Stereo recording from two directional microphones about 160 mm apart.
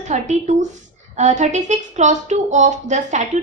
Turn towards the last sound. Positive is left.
turn(degrees=-50)  # may be behind; listen again after turning